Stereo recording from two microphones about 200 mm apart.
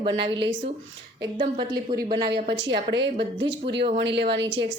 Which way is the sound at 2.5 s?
60° right (ahead or behind).